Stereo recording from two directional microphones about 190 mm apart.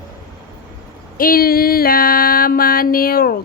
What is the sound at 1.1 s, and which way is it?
Mantra, 50° left (ahead or behind).